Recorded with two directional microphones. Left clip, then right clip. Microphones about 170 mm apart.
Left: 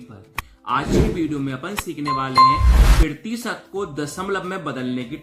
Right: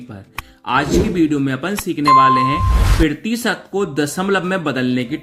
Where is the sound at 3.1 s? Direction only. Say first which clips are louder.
Right 8 dB; 35° right (ahead or behind).